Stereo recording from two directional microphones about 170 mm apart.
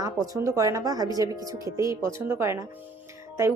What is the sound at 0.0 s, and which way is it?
Speech, 20° right (ahead or behind).